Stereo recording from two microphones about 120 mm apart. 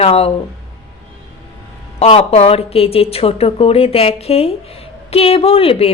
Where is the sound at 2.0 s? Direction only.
55° left (ahead or behind).